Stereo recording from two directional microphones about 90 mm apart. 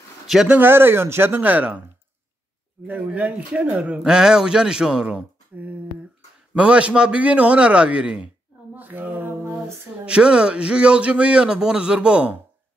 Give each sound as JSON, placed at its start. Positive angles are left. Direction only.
{"t": 0.5, "sound": "speech", "side_deg": -20}
{"t": 2.9, "sound": "speech", "side_deg": -15}
{"t": 8.7, "sound": "a sound", "side_deg": -20}
{"t": 10.0, "sound": "speech", "side_deg": -10}